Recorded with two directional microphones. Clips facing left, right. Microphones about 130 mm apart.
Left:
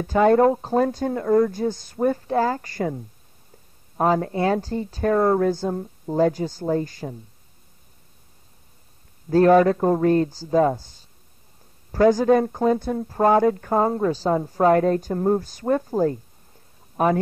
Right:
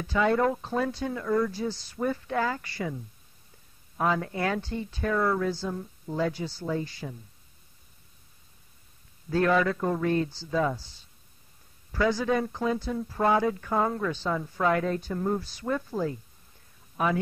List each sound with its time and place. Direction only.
0.0 s speech: 45° left (ahead or behind)
9.3 s a man's voice: 40° left (ahead or behind)